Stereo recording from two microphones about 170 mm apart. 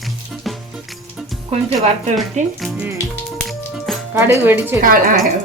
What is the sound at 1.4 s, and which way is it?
Music, 35° right (ahead or behind).